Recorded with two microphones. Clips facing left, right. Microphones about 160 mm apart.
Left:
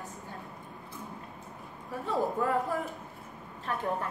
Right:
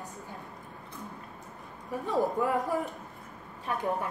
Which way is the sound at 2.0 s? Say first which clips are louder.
Right 1 dB; 15° right (ahead or behind).